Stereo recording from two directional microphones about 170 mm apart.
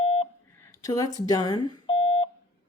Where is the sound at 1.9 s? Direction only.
30° left (ahead or behind).